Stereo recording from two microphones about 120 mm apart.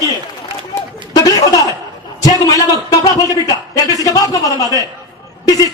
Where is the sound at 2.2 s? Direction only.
30° left (ahead or behind).